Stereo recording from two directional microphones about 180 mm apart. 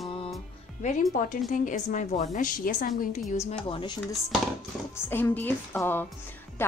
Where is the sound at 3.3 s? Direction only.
35° left (ahead or behind).